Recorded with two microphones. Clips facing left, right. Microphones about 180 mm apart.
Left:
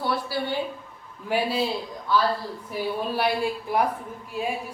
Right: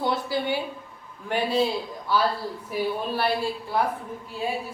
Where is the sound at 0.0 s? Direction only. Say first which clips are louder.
Right 1 dB; 20° right (ahead or behind).